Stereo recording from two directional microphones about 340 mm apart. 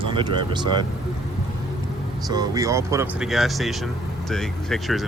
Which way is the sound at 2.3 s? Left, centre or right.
Centre.